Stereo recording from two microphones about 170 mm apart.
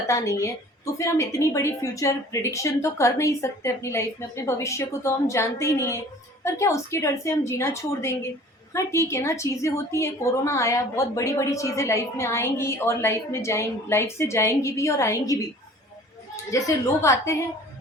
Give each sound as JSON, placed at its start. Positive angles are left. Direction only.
{"t": 0.1, "sound": "a woman's voice", "side_deg": 15}